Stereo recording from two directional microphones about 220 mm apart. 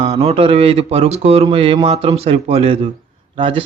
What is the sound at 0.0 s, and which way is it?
A man's voice, 30° right (ahead or behind).